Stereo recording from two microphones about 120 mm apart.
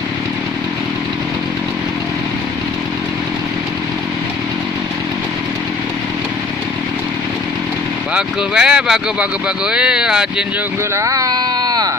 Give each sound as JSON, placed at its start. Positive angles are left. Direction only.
{"t": 8.1, "sound": "speech", "side_deg": -5}
{"t": 11.0, "sound": "speech", "side_deg": -30}